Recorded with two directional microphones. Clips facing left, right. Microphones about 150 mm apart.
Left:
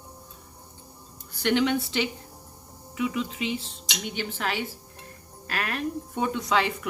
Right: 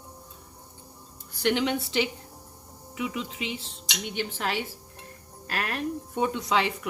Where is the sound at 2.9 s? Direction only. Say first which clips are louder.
Left 4 dB; 20° right (ahead or behind).